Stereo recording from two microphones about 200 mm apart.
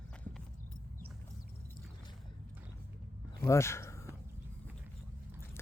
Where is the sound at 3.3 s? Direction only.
15° left (ahead or behind).